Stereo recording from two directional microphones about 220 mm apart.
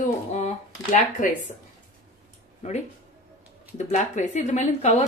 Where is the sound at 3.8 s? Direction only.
35° left (ahead or behind).